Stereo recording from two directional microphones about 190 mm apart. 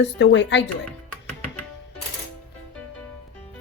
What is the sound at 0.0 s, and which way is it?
Speech, 70° left (ahead or behind).